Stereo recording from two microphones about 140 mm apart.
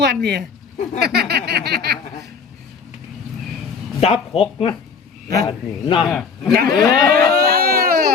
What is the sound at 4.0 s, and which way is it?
A man's voice, 45° left (ahead or behind).